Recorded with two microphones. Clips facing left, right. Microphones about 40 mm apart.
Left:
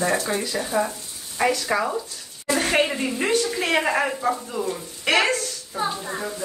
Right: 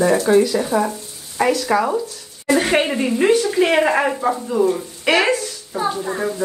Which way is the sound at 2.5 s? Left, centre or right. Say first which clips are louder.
Right 4 dB; right.